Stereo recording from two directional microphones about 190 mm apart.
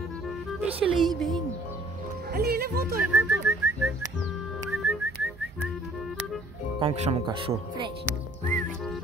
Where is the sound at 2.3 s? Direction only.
55° right (ahead or behind).